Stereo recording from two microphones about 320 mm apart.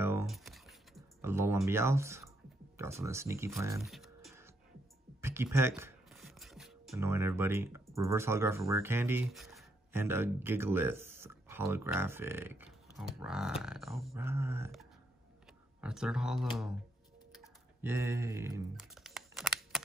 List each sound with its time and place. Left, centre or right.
0.0 s music: centre
2.8 s speech: centre
5.2 s music: centre
7.9 s speech: centre
13.6 s a sound: centre
17.4 s typing: centre